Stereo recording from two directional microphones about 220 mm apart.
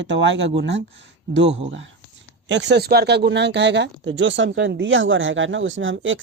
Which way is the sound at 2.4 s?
55° right (ahead or behind).